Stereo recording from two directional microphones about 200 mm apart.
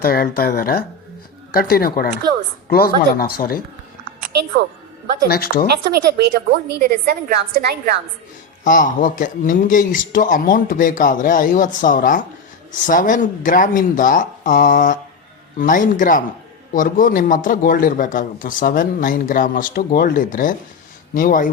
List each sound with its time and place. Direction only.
0.0 s speech: 45° left (ahead or behind)
5.3 s speech: 50° left (ahead or behind)
5.9 s a woman's voice: 50° right (ahead or behind)
8.6 s a man's voice: 40° left (ahead or behind)